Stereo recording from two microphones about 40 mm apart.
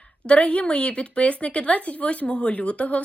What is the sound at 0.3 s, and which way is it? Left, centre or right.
A woman's voice, left.